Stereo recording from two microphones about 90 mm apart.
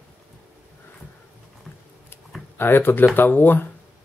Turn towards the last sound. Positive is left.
turn(degrees=25)  # may be behind; listen again after turning